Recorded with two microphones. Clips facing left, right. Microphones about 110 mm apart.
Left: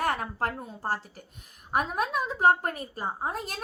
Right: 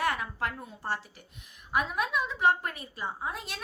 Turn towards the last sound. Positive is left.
turn(degrees=40)  # may be behind; listen again after turning